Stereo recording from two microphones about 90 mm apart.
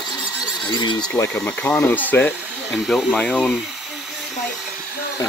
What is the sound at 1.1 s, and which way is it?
Speech, 20° left (ahead or behind).